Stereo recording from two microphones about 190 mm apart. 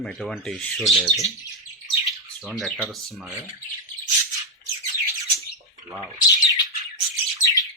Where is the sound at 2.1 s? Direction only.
Centre (ahead or behind).